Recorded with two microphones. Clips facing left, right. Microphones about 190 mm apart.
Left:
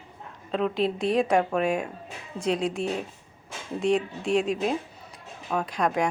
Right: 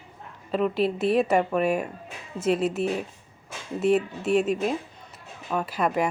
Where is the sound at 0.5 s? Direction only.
5° right (ahead or behind).